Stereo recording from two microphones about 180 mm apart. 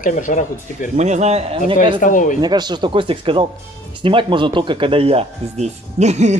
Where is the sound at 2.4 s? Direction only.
25° right (ahead or behind).